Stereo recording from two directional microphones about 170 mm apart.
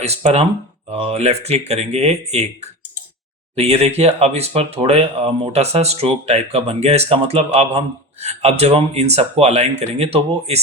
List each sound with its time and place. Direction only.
0.0 s speech: 40° right (ahead or behind)